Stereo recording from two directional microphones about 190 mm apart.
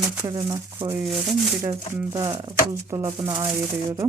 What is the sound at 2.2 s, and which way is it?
Speech, 25° right (ahead or behind).